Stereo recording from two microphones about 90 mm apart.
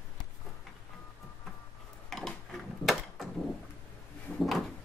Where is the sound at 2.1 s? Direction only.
5° left (ahead or behind).